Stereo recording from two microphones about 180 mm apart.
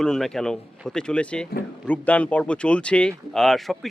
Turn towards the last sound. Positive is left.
turn(degrees=0)  # may be behind; listen again after turning